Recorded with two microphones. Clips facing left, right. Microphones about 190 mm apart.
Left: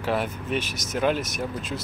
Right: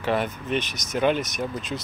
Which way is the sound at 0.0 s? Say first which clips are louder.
Right 1 dB; 5° left (ahead or behind).